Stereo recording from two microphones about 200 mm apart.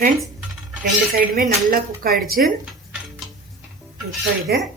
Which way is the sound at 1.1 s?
45° right (ahead or behind).